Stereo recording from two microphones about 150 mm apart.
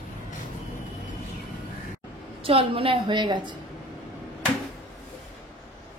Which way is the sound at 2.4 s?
35° right (ahead or behind).